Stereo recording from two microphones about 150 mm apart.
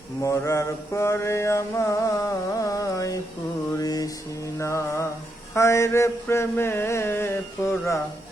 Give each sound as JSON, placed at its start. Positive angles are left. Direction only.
{"t": 0.2, "sound": "mantra", "side_deg": 20}